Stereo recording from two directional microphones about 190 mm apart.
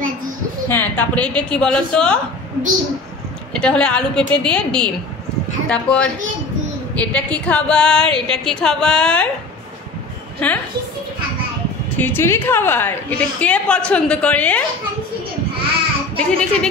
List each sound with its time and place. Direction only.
0.7 s a woman's voice: 10° left (ahead or behind)
3.5 s a woman's voice: 5° left (ahead or behind)
10.4 s a woman's voice: 5° left (ahead or behind)
12.0 s a woman's voice: 10° left (ahead or behind)
16.2 s a woman's voice: 5° left (ahead or behind)